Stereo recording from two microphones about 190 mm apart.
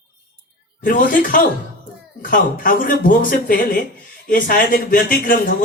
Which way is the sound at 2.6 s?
45° left (ahead or behind).